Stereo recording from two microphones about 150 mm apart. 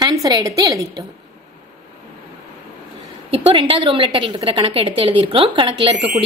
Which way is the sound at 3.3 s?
35° right (ahead or behind).